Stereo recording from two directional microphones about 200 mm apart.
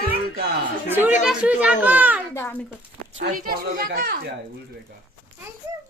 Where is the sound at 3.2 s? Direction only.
45° right (ahead or behind).